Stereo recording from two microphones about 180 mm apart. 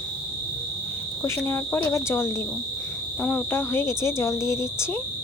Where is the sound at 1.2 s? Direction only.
15° left (ahead or behind).